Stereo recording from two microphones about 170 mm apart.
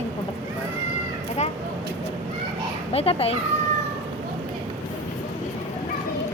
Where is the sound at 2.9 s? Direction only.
35° left (ahead or behind).